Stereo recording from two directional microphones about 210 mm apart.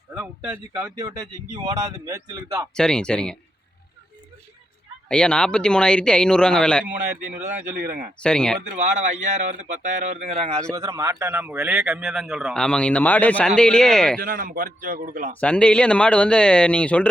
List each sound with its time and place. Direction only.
0.1 s speech: 10° right (ahead or behind)
0.9 s speech: 20° right (ahead or behind)
2.7 s a man's voice: 5° left (ahead or behind)
5.0 s a man's voice: 5° left (ahead or behind)
7.8 s speech: 50° right (ahead or behind)
8.2 s a man's voice: 5° left (ahead or behind)
8.7 s a man's voice: 35° right (ahead or behind)
10.7 s a man's voice: 15° right (ahead or behind); by 14.2 s 5° left (ahead or behind)
14.2 s a man's voice: 45° right (ahead or behind)
15.4 s a man's voice: 5° left (ahead or behind)